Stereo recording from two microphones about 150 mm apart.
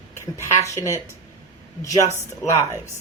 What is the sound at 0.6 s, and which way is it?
Speech, 20° left (ahead or behind).